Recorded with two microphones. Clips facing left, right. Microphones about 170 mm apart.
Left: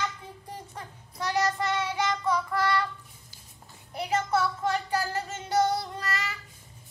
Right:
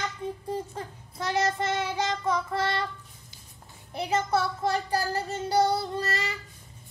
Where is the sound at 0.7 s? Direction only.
25° right (ahead or behind).